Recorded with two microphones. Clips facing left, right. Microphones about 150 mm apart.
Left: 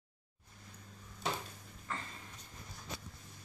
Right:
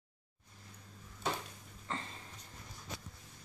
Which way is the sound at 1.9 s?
25° right (ahead or behind).